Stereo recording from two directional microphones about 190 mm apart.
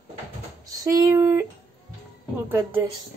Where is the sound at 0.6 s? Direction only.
20° right (ahead or behind).